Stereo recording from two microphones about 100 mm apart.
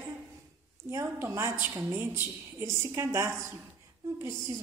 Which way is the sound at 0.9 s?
25° right (ahead or behind).